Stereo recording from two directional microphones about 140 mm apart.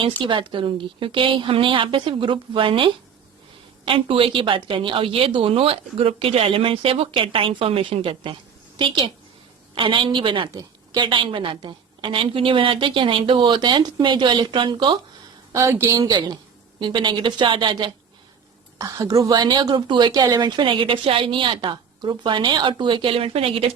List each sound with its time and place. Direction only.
0.2 s a woman's voice: 35° right (ahead or behind)
15.5 s a woman's voice: 20° right (ahead or behind)
16.0 s a woman's voice: 30° right (ahead or behind)
18.8 s a woman's voice: 20° right (ahead or behind); by 23.7 s 40° right (ahead or behind)